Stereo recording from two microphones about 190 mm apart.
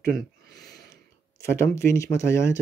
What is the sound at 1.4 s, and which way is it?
Speech, 15° left (ahead or behind).